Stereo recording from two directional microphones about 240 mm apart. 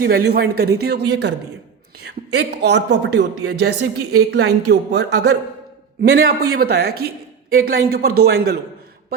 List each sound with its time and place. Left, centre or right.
0.0 s speech: right
2.3 s speech: right